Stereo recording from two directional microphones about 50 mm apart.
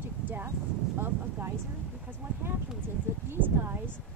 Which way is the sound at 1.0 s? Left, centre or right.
Right.